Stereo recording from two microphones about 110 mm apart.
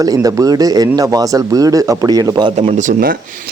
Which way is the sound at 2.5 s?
75° right (ahead or behind).